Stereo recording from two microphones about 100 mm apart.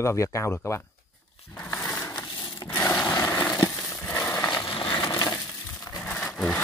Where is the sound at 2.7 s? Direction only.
25° left (ahead or behind).